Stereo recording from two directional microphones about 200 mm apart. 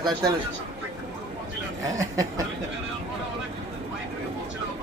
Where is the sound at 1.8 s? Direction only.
15° right (ahead or behind).